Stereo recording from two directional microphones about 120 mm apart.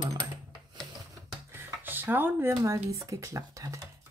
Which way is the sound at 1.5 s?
15° right (ahead or behind).